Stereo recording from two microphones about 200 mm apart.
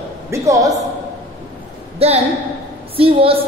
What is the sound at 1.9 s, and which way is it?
A woman's voice, 30° right (ahead or behind).